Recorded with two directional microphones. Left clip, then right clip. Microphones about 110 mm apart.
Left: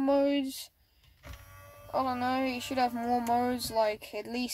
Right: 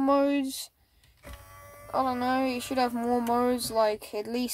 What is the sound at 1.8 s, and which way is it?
Speech, 25° right (ahead or behind).